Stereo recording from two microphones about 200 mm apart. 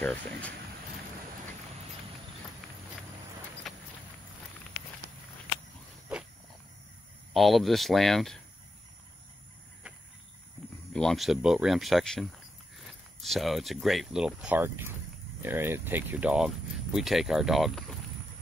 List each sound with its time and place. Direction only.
0.0 s speech: 5° left (ahead or behind)
3.6 s walk: centre (ahead or behind)
7.3 s speech: centre (ahead or behind)
10.9 s speech: 5° left (ahead or behind)